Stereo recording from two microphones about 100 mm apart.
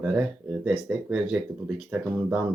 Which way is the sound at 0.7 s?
5° right (ahead or behind).